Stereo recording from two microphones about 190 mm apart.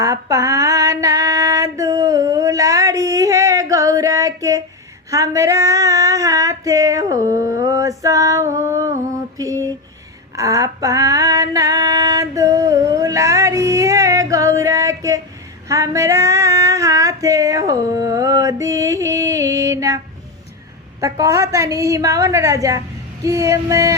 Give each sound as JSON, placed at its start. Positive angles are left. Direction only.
{"t": 0.0, "sound": "female singing", "side_deg": -15}
{"t": 9.4, "sound": "a sound", "side_deg": -15}
{"t": 10.3, "sound": "female singing", "side_deg": -15}
{"t": 21.0, "sound": "a woman's voice", "side_deg": -15}